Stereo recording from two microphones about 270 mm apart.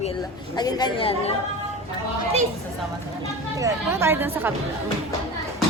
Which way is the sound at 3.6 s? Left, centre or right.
Centre.